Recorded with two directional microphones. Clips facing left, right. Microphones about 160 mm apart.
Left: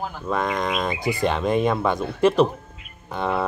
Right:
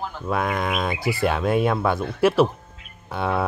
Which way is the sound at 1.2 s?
5° right (ahead or behind).